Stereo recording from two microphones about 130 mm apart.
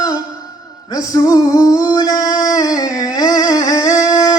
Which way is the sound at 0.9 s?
25° left (ahead or behind).